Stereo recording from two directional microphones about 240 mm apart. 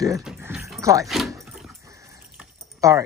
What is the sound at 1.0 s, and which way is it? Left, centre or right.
Speech, centre.